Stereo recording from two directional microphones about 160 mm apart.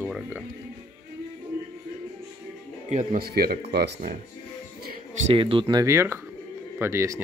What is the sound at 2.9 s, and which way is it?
Speech, 55° right (ahead or behind).